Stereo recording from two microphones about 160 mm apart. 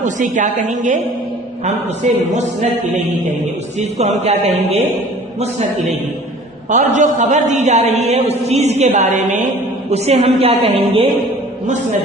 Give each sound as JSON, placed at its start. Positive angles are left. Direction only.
{"t": 0.0, "sound": "a man's voice", "side_deg": -50}
{"t": 3.8, "sound": "a man's voice", "side_deg": -45}
{"t": 6.7, "sound": "a man's voice", "side_deg": -50}
{"t": 11.6, "sound": "a man's voice", "side_deg": -50}